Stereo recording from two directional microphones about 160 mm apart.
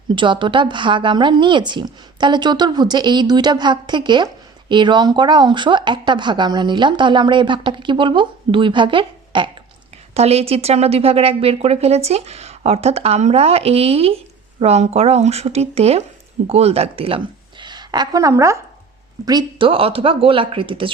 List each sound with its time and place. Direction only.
0.2 s a woman's voice: 30° right (ahead or behind)